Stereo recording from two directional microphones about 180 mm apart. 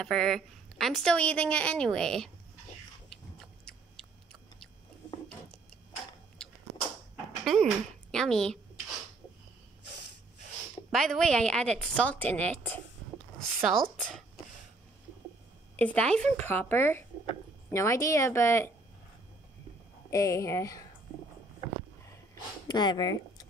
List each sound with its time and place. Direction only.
0.0 s a woman's voice: centre (ahead or behind)
7.5 s a woman's voice: centre (ahead or behind)
10.9 s a woman's voice: centre (ahead or behind)
15.7 s a woman's voice: 10° left (ahead or behind)
20.1 s a woman's voice: 15° left (ahead or behind)
22.3 s a sound: 25° left (ahead or behind)